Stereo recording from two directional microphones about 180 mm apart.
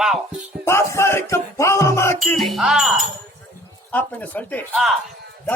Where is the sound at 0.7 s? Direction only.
15° left (ahead or behind).